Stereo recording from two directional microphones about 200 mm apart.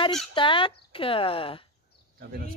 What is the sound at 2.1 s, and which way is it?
Speech, 45° right (ahead or behind).